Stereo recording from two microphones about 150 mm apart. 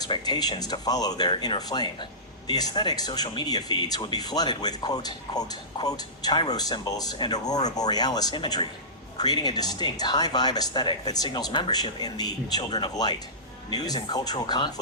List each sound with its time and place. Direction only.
0.0 s speech: 25° left (ahead or behind)